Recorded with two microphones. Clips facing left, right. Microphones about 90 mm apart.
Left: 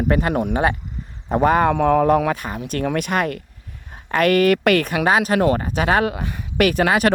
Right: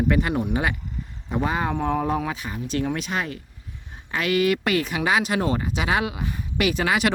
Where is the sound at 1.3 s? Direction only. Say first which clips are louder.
Left 9 dB; 55° left (ahead or behind).